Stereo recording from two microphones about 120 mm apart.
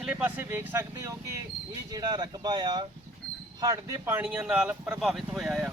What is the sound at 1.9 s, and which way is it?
Speech, 35° right (ahead or behind).